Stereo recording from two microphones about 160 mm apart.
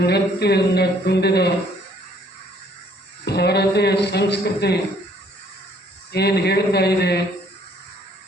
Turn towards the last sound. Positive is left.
turn(degrees=90)